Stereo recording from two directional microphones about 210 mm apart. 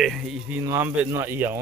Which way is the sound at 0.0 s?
Centre (ahead or behind).